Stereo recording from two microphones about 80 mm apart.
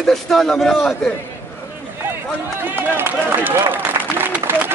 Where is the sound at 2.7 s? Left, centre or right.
Right.